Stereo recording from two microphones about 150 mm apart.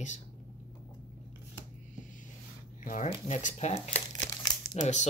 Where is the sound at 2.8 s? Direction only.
60° left (ahead or behind).